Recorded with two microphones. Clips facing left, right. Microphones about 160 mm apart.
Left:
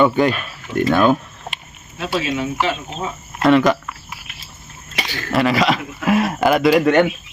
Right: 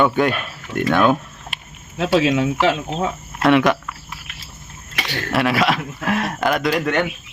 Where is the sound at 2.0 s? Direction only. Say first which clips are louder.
Right 5 dB; 90° right.